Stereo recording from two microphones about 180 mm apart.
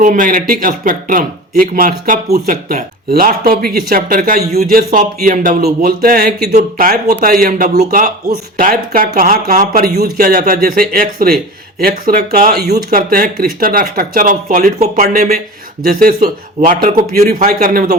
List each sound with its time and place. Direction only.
0.0 s speech: 50° right (ahead or behind)
6.5 s speech: 50° right (ahead or behind)